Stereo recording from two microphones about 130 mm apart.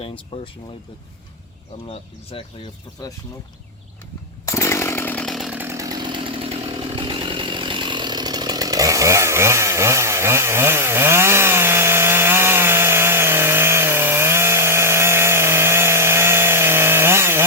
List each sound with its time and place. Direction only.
2.3 s speech: 45° left (ahead or behind)
4.4 s chainsaw: 20° left (ahead or behind); by 5.5 s centre (ahead or behind)
5.5 s chainsaw: 20° right (ahead or behind)